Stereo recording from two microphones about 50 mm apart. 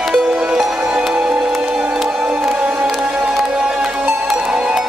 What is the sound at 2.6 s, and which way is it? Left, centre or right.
Music, right.